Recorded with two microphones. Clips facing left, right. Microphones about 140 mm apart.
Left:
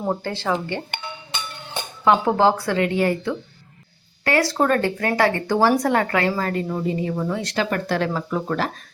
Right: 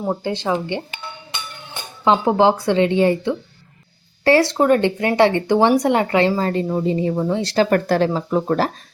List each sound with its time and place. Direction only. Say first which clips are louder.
0.2 s speech: right 3 dB; 15° right (ahead or behind)
2.0 s speech: right 2 dB; 20° right (ahead or behind)
4.5 s speech: right 4 dB; 15° right (ahead or behind); by 8.0 s 45° right (ahead or behind)
8.0 s speech: right 5 dB; 30° right (ahead or behind)